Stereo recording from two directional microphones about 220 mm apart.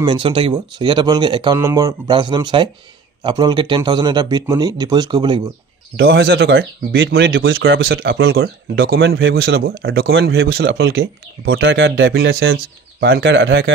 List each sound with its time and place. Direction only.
0.0 s speech: 20° right (ahead or behind)
5.9 s speech: 55° right (ahead or behind)
7.9 s speech: 45° right (ahead or behind)
9.8 s speech: 60° right (ahead or behind)
10.4 s speech: 45° right (ahead or behind)